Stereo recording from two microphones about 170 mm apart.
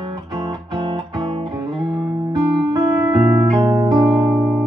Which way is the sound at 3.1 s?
30° right (ahead or behind).